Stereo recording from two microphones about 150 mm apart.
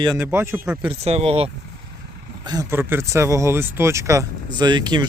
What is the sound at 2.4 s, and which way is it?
Speech, 25° right (ahead or behind).